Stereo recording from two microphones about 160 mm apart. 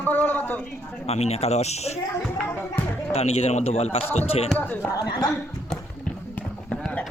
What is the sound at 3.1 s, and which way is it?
Speech, 40° left (ahead or behind).